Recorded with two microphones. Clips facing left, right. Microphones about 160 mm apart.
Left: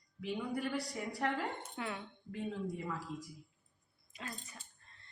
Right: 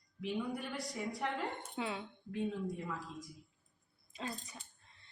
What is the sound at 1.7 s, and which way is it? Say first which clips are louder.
Speech: right 2 dB; 15° right (ahead or behind).